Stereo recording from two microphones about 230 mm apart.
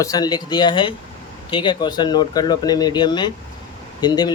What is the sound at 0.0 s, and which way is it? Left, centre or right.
Speech, centre.